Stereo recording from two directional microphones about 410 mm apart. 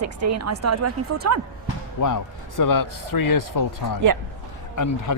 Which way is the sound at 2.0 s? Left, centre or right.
Left.